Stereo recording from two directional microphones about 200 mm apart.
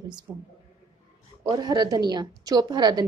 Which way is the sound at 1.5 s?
20° right (ahead or behind).